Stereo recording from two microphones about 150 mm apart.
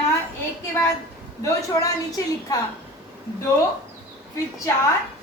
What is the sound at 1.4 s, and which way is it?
A woman's voice, 25° left (ahead or behind).